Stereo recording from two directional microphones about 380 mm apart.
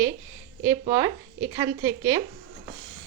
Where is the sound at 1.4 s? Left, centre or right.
Centre.